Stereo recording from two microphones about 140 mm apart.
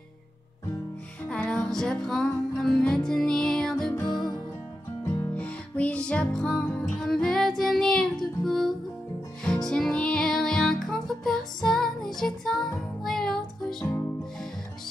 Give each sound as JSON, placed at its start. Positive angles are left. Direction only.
{"t": 1.3, "sound": "music", "side_deg": 5}
{"t": 3.9, "sound": "music", "side_deg": 30}
{"t": 5.3, "sound": "music", "side_deg": 10}